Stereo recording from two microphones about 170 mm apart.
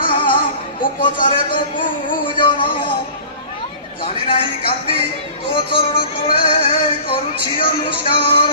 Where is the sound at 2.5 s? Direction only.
30° left (ahead or behind).